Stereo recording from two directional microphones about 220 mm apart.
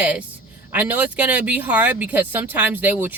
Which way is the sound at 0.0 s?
5° right (ahead or behind).